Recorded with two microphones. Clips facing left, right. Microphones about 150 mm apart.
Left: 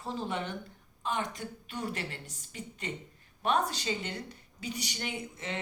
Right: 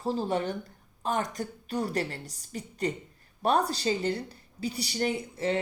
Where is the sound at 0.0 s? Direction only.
35° right (ahead or behind).